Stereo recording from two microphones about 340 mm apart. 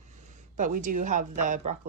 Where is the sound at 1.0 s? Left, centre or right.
Right.